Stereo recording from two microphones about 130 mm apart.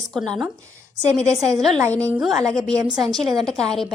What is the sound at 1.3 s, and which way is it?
Speech, 25° right (ahead or behind).